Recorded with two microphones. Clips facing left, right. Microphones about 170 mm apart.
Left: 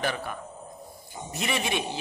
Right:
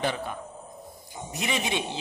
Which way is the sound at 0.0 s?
20° right (ahead or behind).